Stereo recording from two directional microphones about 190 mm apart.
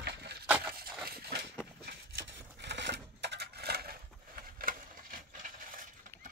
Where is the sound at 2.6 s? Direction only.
65° right (ahead or behind); by 5.9 s 45° right (ahead or behind).